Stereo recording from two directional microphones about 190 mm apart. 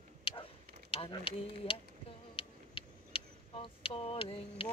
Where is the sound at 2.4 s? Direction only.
30° left (ahead or behind).